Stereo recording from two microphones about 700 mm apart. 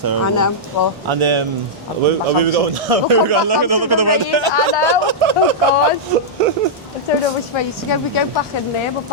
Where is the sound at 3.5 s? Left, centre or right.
Right.